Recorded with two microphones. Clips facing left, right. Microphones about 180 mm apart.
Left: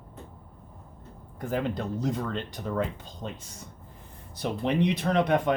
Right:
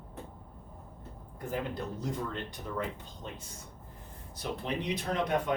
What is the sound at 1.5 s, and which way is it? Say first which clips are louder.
Speech: left 6 dB; 90° left.